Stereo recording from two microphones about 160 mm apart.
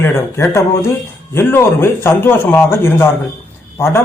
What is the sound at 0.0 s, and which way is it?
Speech, 15° left (ahead or behind).